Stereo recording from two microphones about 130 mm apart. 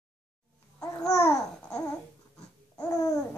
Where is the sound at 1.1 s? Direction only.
25° left (ahead or behind).